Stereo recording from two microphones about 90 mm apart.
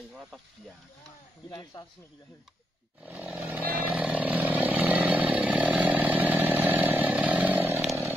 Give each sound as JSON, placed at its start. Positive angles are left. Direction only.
{"t": 1.5, "sound": "speech", "side_deg": 45}
{"t": 3.0, "sound": "chainsaw", "side_deg": -20}